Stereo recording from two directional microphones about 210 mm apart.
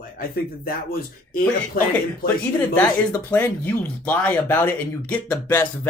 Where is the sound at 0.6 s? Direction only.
45° left (ahead or behind).